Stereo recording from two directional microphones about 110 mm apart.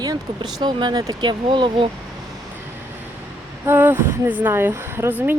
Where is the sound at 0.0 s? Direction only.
40° right (ahead or behind).